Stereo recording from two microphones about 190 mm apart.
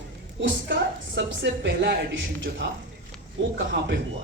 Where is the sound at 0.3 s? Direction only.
75° right (ahead or behind).